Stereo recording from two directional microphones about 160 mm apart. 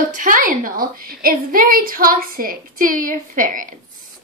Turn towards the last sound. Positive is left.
turn(degrees=-60)  # may be behind; listen again after turning